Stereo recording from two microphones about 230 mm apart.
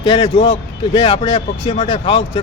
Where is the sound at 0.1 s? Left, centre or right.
Left.